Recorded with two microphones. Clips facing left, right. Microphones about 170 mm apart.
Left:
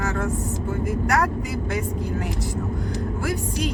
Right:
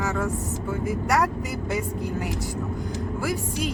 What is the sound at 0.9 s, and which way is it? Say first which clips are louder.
Speech: left 1 dB; centre (ahead or behind).